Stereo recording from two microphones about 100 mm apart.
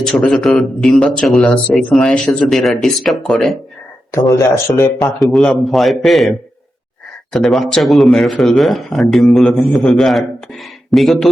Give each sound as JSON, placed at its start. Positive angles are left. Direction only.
{"t": 0.0, "sound": "speech", "side_deg": 5}
{"t": 4.1, "sound": "speech", "side_deg": 30}
{"t": 4.9, "sound": "speech", "side_deg": 0}
{"t": 7.3, "sound": "speech", "side_deg": 0}